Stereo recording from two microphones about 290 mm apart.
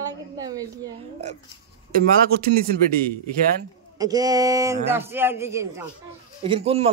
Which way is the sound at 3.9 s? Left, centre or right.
Centre.